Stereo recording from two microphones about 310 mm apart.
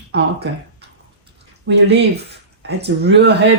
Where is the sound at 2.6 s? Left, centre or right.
Right.